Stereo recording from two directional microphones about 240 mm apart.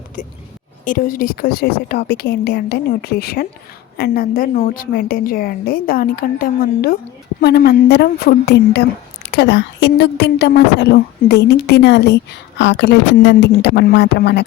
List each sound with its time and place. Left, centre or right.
0.2 s a woman's voice: left